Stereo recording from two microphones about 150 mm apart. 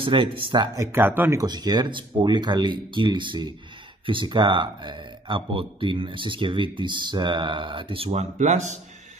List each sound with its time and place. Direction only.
0.0 s speech: 35° right (ahead or behind)
0.7 s speech: 15° right (ahead or behind)
1.4 s speech: 25° right (ahead or behind); by 8.7 s 50° right (ahead or behind)